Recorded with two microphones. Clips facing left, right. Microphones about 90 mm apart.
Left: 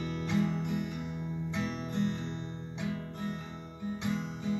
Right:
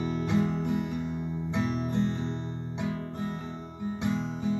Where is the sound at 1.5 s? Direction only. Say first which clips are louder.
Right 7 dB; 20° right (ahead or behind).